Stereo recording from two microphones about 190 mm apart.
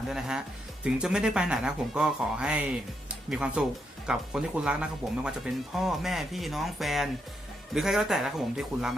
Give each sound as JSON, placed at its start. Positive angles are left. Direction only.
{"t": 0.1, "sound": "speech", "side_deg": -5}